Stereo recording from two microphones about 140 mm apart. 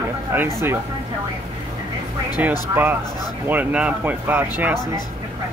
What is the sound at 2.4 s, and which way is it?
Speech, 10° right (ahead or behind).